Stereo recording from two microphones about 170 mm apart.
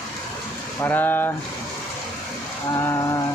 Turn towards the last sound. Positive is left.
turn(degrees=15)  # may be behind; listen again after turning